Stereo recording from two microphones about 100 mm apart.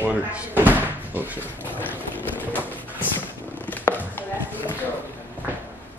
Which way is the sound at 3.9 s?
20° left (ahead or behind).